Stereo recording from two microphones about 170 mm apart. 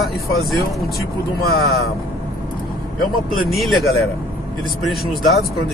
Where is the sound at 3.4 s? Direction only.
Centre (ahead or behind).